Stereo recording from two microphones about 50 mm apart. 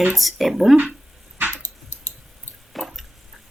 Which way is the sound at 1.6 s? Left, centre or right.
Left.